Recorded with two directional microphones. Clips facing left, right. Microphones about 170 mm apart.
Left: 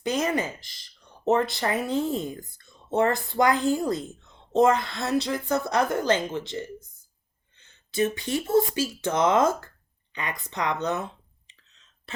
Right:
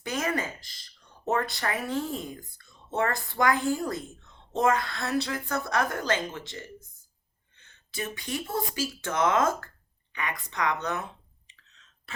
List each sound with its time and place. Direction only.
0.0 s a woman's voice: 20° left (ahead or behind)
7.9 s a woman's voice: 25° left (ahead or behind)